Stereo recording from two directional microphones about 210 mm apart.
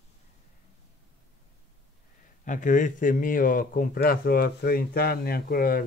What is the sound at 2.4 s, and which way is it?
Speech, 35° left (ahead or behind).